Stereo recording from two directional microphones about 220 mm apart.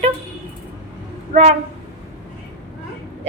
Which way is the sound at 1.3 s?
30° right (ahead or behind).